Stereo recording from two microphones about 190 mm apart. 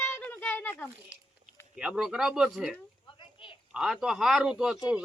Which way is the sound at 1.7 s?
5° right (ahead or behind).